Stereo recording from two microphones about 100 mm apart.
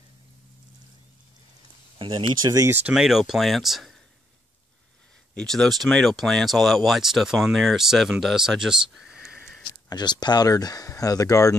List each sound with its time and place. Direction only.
2.0 s a sound: 60° right (ahead or behind)
2.4 s speech: 35° right (ahead or behind)
2.7 s speech: 10° right (ahead or behind)
5.3 s speech: 5° left (ahead or behind)
9.8 s speech: 45° left (ahead or behind)